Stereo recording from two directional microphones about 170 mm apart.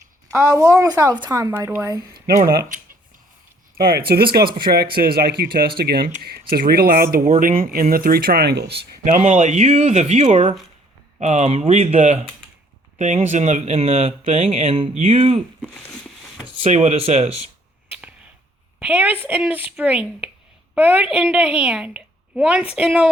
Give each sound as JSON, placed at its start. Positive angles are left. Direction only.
{"t": 0.3, "sound": "speech", "side_deg": -20}
{"t": 3.8, "sound": "speech", "side_deg": -65}
{"t": 9.0, "sound": "speech", "side_deg": -45}
{"t": 15.4, "sound": "speech", "side_deg": 5}
{"t": 16.6, "sound": "speech", "side_deg": -40}
{"t": 18.8, "sound": "a woman's voice", "side_deg": -10}